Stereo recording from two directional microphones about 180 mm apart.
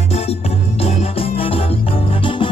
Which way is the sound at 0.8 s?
30° left (ahead or behind).